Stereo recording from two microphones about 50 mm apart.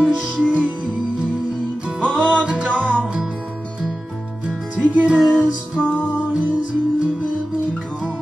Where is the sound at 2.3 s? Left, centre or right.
Right.